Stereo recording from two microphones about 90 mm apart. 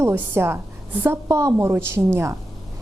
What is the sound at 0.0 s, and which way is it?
A woman's voice, 25° right (ahead or behind).